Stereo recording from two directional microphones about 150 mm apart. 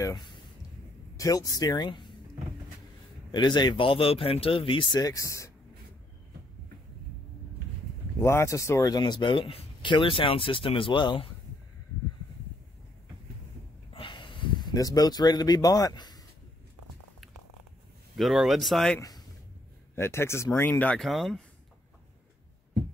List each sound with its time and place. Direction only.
0.0 s speech: 30° left (ahead or behind)
3.3 s speech: 30° left (ahead or behind)
8.2 s speech: 15° left (ahead or behind)
13.9 s a sound: 35° left (ahead or behind)
18.1 s speech: centre (ahead or behind)
18.9 s speech: 25° left (ahead or behind); by 21.4 s centre (ahead or behind)